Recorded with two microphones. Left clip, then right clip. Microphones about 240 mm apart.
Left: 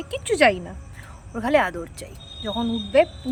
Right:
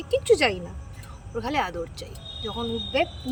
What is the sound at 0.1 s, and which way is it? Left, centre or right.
A woman's voice, centre.